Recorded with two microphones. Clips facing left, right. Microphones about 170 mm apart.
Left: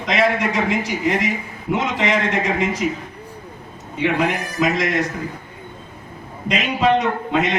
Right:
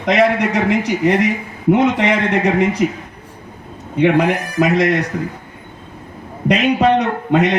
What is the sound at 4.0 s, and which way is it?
Speech, 60° right (ahead or behind).